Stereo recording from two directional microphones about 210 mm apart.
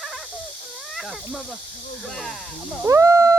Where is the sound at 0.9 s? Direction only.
Centre (ahead or behind).